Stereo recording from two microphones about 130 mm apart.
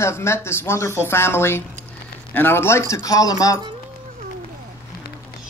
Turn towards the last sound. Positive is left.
turn(degrees=25)  # may be behind; listen again after turning